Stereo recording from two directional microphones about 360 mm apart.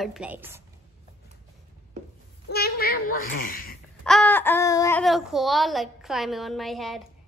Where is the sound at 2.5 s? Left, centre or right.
Left.